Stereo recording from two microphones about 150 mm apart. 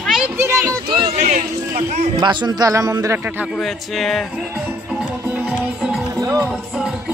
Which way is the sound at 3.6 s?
Centre (ahead or behind).